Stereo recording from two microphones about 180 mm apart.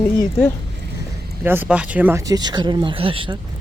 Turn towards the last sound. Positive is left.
turn(degrees=-30)  # may be behind; listen again after turning